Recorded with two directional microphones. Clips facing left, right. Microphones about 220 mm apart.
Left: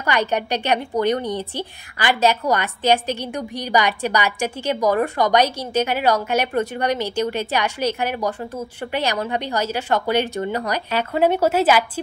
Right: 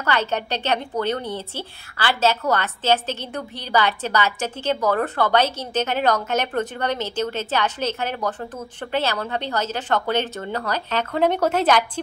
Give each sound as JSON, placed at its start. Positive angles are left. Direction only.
{"t": 0.0, "sound": "a woman's voice", "side_deg": 15}